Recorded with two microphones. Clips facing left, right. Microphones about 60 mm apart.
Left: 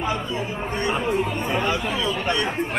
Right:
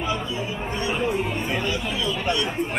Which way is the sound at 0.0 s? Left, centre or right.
Left.